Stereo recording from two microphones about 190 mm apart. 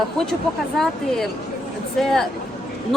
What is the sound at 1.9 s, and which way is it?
Speech, centre (ahead or behind).